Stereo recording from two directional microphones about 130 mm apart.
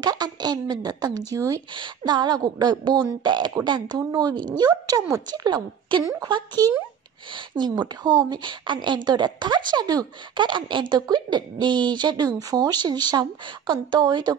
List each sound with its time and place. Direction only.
0.0 s a woman's voice: 30° right (ahead or behind)